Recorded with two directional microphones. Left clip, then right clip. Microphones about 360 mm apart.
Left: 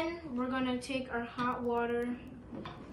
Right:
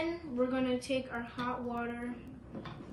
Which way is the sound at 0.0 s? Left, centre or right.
Centre.